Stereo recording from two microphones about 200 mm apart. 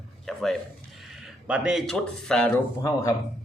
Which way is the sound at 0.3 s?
Centre (ahead or behind).